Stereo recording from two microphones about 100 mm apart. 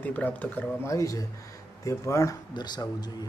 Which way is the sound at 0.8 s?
35° left (ahead or behind).